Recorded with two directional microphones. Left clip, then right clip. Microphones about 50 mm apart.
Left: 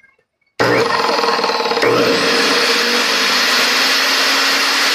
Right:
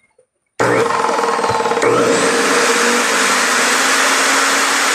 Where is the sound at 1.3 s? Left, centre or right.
Right.